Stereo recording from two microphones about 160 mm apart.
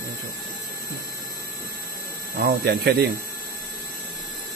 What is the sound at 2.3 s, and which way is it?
Speech, 70° right (ahead or behind).